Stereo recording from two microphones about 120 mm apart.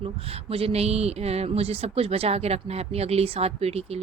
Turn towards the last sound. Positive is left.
turn(degrees=-60)  # may be behind; listen again after turning